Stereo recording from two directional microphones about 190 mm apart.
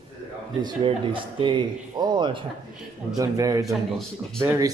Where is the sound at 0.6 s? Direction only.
25° right (ahead or behind).